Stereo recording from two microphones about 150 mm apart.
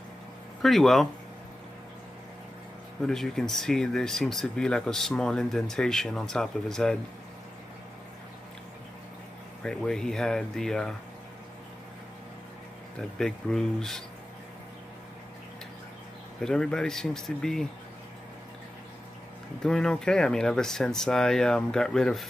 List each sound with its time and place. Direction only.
0.6 s speech: centre (ahead or behind)
3.0 s speech: 5° left (ahead or behind)
9.6 s speech: 5° left (ahead or behind)
13.2 s speech: 5° left (ahead or behind)
16.3 s speech: 5° left (ahead or behind)
19.6 s speech: 5° left (ahead or behind)